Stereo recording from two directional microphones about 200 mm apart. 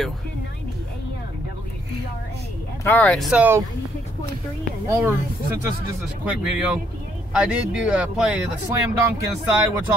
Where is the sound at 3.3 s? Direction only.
5° right (ahead or behind).